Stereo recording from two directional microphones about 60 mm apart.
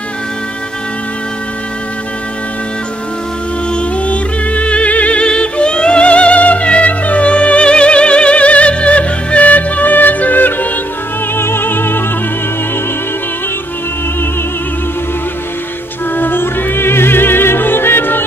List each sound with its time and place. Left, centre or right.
3.7 s music: left
11.3 s opera: left
16.2 s music: left